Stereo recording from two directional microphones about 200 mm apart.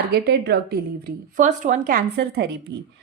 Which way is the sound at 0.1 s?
55° right (ahead or behind).